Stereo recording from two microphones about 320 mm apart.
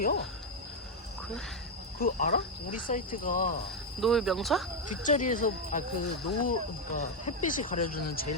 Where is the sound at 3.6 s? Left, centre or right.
Centre.